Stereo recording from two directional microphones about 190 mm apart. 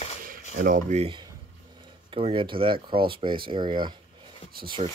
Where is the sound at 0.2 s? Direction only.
45° right (ahead or behind).